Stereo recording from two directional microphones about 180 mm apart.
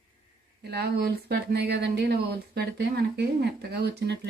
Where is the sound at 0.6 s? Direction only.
65° right (ahead or behind).